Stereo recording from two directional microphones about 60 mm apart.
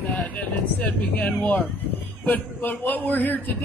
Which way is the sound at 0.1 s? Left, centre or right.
Left.